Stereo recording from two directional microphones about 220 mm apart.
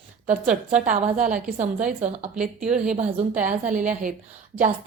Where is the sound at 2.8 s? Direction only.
35° right (ahead or behind).